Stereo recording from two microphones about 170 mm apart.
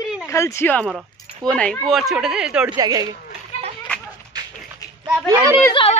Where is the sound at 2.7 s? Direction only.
20° right (ahead or behind).